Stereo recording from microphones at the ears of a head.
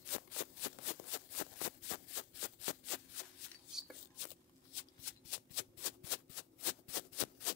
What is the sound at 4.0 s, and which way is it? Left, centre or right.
Shuffling cards, left.